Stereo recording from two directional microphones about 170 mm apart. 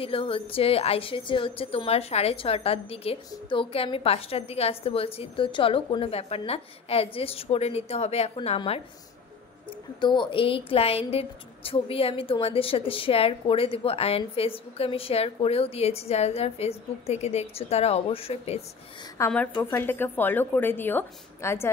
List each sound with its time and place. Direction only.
0.0 s a woman's voice: 35° left (ahead or behind)
9.9 s a woman's voice: 25° left (ahead or behind)
19.1 s a woman's voice: 15° left (ahead or behind)